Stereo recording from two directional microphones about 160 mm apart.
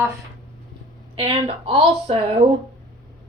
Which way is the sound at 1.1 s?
35° right (ahead or behind).